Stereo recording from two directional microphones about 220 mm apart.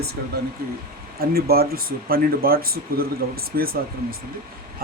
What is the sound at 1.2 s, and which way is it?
Speech, 45° right (ahead or behind).